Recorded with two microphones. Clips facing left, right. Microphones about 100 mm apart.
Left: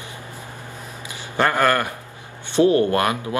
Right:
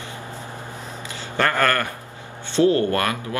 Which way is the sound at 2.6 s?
20° left (ahead or behind).